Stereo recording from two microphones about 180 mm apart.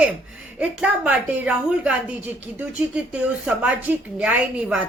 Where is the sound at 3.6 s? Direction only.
5° right (ahead or behind).